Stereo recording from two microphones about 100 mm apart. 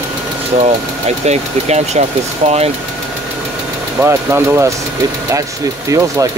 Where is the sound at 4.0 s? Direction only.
25° right (ahead or behind).